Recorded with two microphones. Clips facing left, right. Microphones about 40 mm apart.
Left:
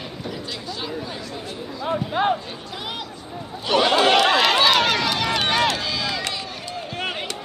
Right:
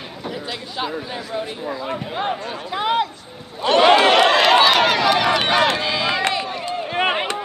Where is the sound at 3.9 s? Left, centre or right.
Centre.